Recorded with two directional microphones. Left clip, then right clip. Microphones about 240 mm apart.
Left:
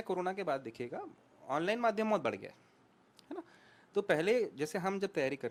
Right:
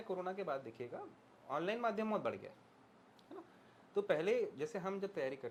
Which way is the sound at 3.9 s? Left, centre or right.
Left.